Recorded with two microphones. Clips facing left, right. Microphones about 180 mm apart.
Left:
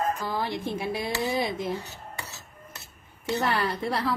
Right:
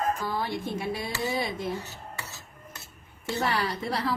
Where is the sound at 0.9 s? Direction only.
55° left (ahead or behind).